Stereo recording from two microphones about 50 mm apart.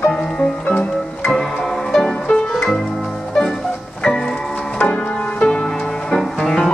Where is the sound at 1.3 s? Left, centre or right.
Centre.